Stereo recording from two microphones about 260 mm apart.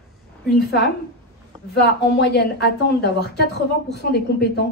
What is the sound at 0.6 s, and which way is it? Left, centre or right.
Speech, left.